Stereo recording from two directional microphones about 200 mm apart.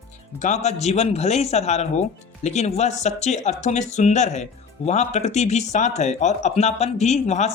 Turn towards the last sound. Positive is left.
turn(degrees=35)  # may be behind; listen again after turning